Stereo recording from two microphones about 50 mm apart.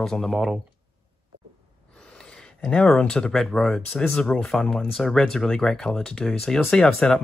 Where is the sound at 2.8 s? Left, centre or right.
Centre.